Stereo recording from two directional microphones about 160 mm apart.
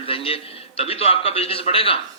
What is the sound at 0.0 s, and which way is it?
A man's voice, 35° left (ahead or behind).